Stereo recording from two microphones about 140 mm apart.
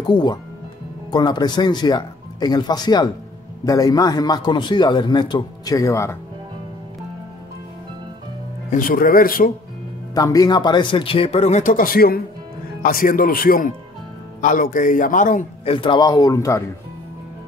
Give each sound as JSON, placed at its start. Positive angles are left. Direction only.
{"t": 0.0, "sound": "a man's voice", "side_deg": 30}
{"t": 8.6, "sound": "speech", "side_deg": 85}
{"t": 10.1, "sound": "speech", "side_deg": 25}
{"t": 14.4, "sound": "a man's voice", "side_deg": 70}
{"t": 15.6, "sound": "a man's voice", "side_deg": 40}